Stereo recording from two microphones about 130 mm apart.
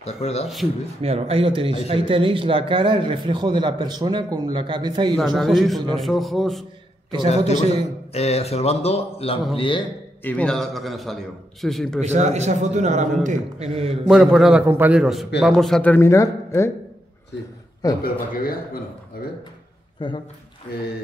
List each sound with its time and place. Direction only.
0.0 s speech: 55° left (ahead or behind)
1.0 s a man's voice: 50° right (ahead or behind)
5.1 s a man's voice: centre (ahead or behind)
7.2 s a man's voice: 55° left (ahead or behind)
9.6 s a man's voice: 40° left (ahead or behind)
10.2 s a man's voice: 10° left (ahead or behind)
12.0 s a man's voice: 65° right (ahead or behind)
14.0 s a man's voice: centre (ahead or behind)
14.7 s a man's voice: 15° right (ahead or behind)
15.0 s a man's voice: centre (ahead or behind)
16.1 s speech: 20° left (ahead or behind)
17.8 s speech: 30° left (ahead or behind)
18.3 s speech: 90° left
20.0 s a man's voice: 40° left (ahead or behind)